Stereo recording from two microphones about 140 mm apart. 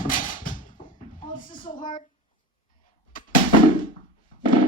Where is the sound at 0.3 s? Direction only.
75° left (ahead or behind).